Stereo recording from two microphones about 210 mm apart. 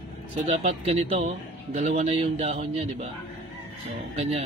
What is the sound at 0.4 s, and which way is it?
A man's voice, 30° right (ahead or behind).